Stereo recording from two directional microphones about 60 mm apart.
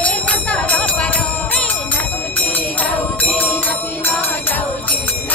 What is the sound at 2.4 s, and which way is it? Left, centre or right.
Music, left.